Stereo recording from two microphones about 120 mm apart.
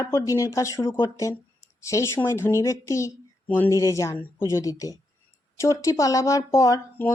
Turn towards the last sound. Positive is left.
turn(degrees=25)  # may be behind; listen again after turning